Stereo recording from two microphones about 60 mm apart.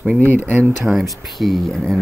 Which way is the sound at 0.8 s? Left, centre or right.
Centre.